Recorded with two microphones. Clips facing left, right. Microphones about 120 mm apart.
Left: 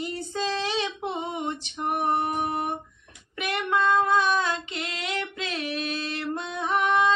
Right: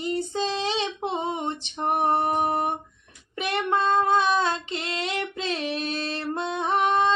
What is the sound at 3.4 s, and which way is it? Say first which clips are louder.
Female singing: right 1 dB; 30° right (ahead or behind).